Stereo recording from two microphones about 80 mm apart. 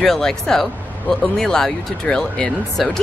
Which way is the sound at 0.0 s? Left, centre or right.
Centre.